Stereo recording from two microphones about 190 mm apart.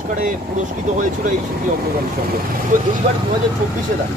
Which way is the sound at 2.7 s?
40° right (ahead or behind).